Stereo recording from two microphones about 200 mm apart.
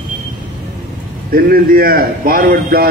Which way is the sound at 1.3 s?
50° right (ahead or behind).